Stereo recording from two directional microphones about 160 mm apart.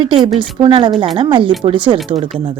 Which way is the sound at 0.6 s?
30° right (ahead or behind).